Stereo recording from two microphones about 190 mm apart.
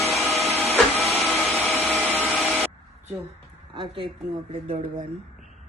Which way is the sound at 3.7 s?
25° right (ahead or behind).